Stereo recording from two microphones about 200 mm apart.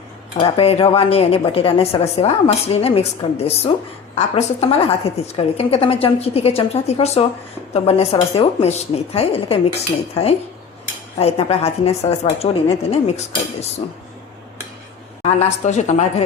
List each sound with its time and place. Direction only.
0.3 s a woman's voice: 25° left (ahead or behind)
11.2 s a woman's voice: 30° left (ahead or behind)
15.2 s a woman's voice: 35° left (ahead or behind)